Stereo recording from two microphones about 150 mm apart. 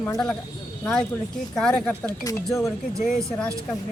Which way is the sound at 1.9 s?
20° left (ahead or behind).